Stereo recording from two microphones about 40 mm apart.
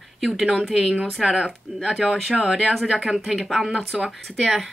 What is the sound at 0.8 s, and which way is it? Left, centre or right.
Speech, right.